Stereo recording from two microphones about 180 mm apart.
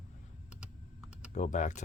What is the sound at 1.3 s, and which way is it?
Speech, 40° left (ahead or behind).